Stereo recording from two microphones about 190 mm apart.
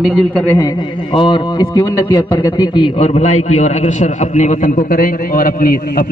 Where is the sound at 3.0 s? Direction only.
35° left (ahead or behind).